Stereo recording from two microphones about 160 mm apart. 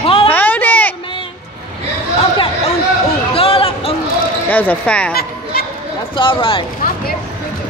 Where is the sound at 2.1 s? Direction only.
35° left (ahead or behind).